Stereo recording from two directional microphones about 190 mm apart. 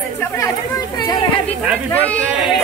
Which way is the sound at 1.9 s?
10° left (ahead or behind).